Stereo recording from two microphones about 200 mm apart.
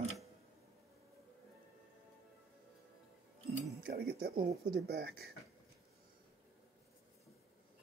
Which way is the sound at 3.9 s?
50° right (ahead or behind).